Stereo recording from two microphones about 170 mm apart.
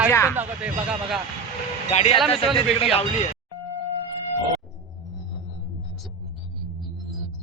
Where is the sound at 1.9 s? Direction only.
40° left (ahead or behind).